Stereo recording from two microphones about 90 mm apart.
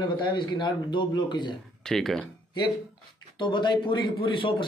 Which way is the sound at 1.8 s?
5° left (ahead or behind).